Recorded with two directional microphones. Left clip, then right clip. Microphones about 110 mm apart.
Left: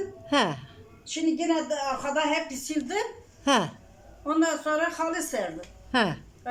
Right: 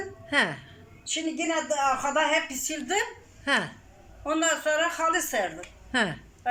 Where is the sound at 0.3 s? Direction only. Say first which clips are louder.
Even; 20° left (ahead or behind).